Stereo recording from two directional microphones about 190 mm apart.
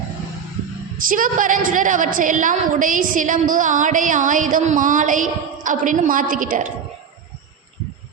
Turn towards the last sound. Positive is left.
turn(degrees=-45)  # may be behind; listen again after turning